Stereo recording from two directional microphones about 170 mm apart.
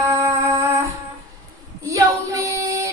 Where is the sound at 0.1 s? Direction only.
15° right (ahead or behind).